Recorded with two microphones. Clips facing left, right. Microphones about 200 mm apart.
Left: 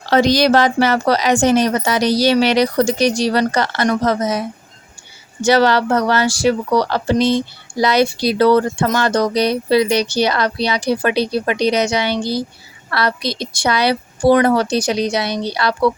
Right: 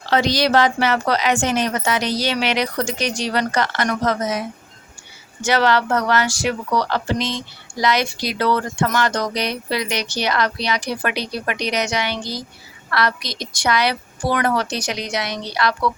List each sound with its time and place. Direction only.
0.0 s a woman's voice: 45° left (ahead or behind)